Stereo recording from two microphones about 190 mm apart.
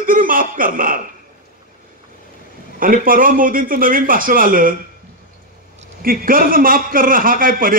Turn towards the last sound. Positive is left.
turn(degrees=-45)  # may be behind; listen again after turning